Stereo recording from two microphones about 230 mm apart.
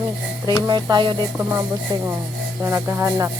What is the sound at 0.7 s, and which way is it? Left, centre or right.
Speech, centre.